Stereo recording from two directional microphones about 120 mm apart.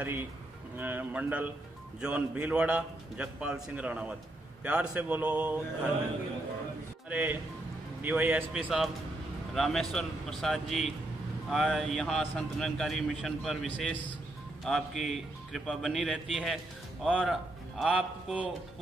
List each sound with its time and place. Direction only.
0.0 s a man's voice: 20° right (ahead or behind)
7.1 s a man's voice: 15° right (ahead or behind)
9.5 s a man's voice: 5° left (ahead or behind)